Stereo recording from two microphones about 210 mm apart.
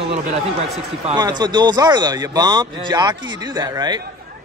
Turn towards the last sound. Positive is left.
turn(degrees=-20)  # may be behind; listen again after turning